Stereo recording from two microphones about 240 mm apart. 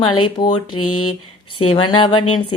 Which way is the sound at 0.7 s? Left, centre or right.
Left.